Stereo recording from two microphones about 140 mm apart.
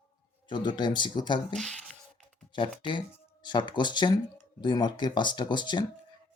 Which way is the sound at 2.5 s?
35° left (ahead or behind).